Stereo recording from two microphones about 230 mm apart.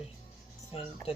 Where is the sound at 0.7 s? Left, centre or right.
Left.